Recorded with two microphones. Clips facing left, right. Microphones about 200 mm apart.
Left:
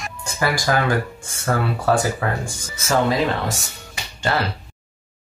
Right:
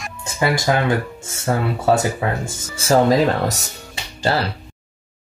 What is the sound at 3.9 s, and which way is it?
Music, 35° right (ahead or behind).